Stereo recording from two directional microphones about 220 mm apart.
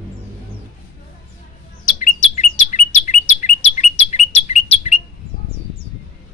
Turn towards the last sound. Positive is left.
turn(degrees=30)  # may be behind; listen again after turning